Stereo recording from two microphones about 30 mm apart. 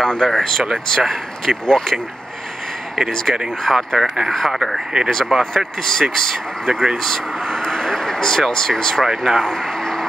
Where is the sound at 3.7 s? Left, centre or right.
Centre.